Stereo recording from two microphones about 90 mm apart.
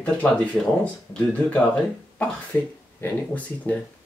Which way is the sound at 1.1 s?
10° left (ahead or behind).